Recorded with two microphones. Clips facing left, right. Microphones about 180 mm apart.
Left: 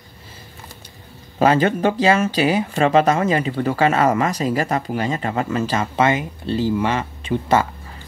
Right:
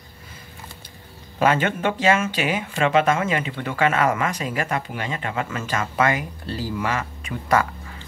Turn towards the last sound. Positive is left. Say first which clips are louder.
# left 3 dB
turn(degrees=25)  # may be behind; listen again after turning